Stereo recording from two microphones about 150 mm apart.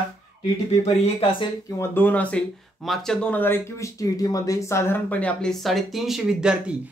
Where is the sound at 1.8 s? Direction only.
10° left (ahead or behind).